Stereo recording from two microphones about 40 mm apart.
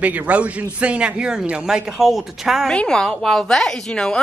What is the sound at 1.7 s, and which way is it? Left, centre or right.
A woman's voice, centre.